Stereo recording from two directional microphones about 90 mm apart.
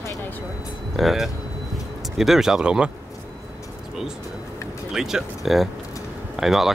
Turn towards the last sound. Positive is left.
turn(degrees=-5)  # may be behind; listen again after turning